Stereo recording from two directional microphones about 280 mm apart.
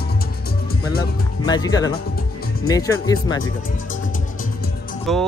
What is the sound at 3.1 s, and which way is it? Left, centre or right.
Speech, centre.